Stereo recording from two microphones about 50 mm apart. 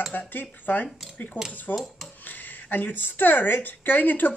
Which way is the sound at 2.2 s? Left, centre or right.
Left.